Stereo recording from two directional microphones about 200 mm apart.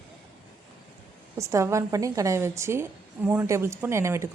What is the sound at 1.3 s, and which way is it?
A woman's voice, 15° right (ahead or behind).